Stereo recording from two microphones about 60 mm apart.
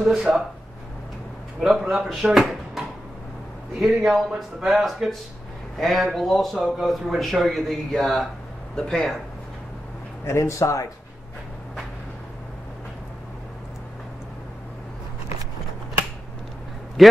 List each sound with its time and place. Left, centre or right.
0.0 s speech: centre
1.6 s speech: centre
3.8 s speech: centre
10.2 s speech: left
17.0 s a man's voice: centre